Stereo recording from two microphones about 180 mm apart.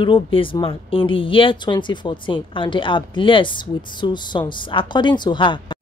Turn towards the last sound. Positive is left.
turn(degrees=25)  # may be behind; listen again after turning